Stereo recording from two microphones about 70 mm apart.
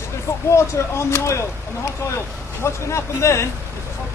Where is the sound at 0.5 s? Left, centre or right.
Left.